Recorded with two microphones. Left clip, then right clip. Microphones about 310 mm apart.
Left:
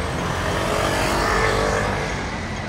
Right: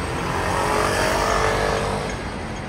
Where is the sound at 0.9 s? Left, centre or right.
Right.